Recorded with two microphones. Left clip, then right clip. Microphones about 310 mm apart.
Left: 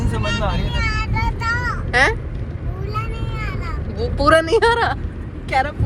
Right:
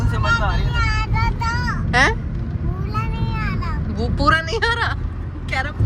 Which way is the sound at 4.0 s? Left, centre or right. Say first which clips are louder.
Left 3 dB; centre.